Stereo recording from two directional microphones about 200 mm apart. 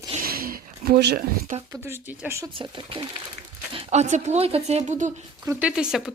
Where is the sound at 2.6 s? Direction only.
25° right (ahead or behind).